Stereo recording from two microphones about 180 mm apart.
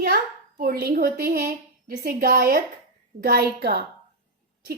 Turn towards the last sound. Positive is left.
turn(degrees=-60)  # may be behind; listen again after turning